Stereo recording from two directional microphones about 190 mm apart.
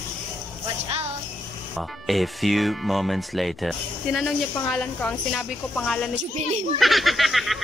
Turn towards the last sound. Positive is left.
turn(degrees=0)  # may be behind; listen again after turning